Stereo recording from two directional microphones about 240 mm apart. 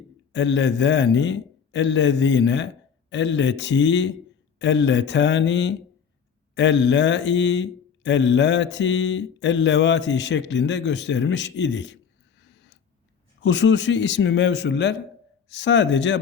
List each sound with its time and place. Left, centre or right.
0.3 s speech: left
12.4 s a sound: left
13.4 s speech: left